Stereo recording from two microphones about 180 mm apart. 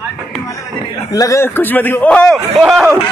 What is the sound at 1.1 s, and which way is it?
A man's voice, 20° left (ahead or behind).